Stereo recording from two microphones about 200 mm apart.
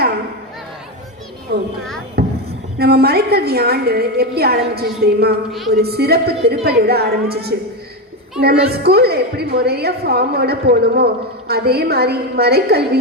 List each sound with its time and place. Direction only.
2.2 s a sound: 50° right (ahead or behind)
2.7 s a woman's voice: 50° right (ahead or behind)
5.5 s a woman's voice: centre (ahead or behind)
5.7 s a woman's voice: 50° right (ahead or behind)